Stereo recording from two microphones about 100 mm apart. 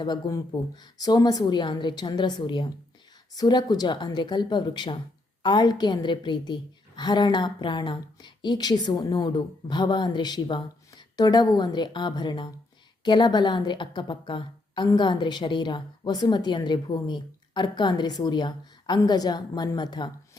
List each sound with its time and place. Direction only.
0.0 s a woman's voice: 40° left (ahead or behind)